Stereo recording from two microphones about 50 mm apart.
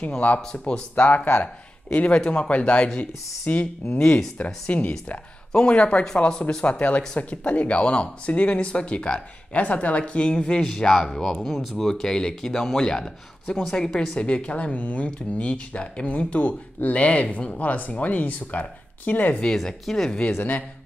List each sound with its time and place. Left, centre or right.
0.4 s speech: centre
3.0 s speech: left; by 14.0 s centre
14.1 s speech: left
19.4 s speech: centre